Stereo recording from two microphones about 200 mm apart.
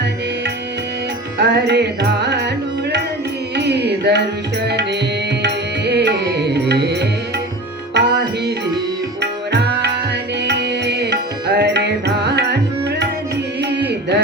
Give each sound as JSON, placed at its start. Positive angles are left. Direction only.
{"t": 1.4, "sound": "music", "side_deg": -60}
{"t": 3.5, "sound": "music", "side_deg": -55}
{"t": 9.2, "sound": "tabla", "side_deg": -60}
{"t": 10.4, "sound": "music", "side_deg": -60}
{"t": 13.6, "sound": "music", "side_deg": -60}